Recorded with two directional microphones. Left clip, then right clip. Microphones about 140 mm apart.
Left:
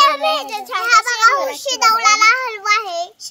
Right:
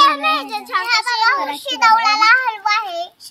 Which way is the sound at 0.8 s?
45° left (ahead or behind).